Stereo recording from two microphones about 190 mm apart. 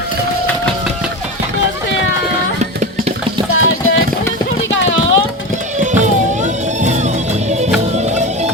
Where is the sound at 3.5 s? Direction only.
90° left.